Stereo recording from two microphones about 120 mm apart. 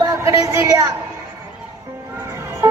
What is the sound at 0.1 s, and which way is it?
Speech, 25° right (ahead or behind).